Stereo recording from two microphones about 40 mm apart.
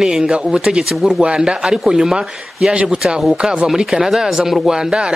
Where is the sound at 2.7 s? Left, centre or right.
Right.